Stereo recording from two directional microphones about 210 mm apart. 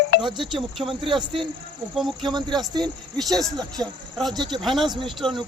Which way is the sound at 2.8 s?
Centre (ahead or behind).